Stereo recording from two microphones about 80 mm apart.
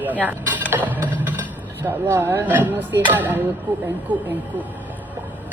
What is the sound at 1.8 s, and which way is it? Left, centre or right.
A woman's voice, right.